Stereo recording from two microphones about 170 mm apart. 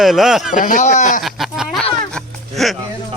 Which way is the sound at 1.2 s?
Centre (ahead or behind).